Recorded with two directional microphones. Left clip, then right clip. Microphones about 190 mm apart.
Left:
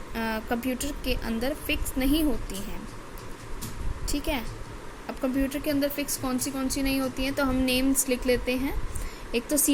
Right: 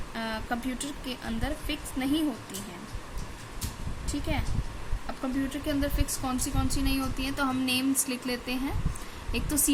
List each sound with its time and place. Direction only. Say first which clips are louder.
0.1 s speech: left 3 dB; 15° left (ahead or behind)
4.1 s speech: left 3 dB; 15° left (ahead or behind)
5.5 s speech: left 3 dB; 15° left (ahead or behind)